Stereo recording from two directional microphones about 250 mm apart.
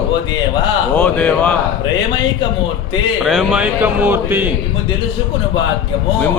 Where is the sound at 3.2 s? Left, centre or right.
Centre.